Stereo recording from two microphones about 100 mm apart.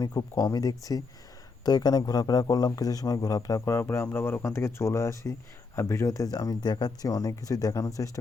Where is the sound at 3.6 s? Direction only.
25° left (ahead or behind).